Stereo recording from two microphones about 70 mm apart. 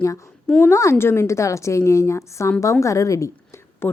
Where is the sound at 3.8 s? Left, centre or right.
Left.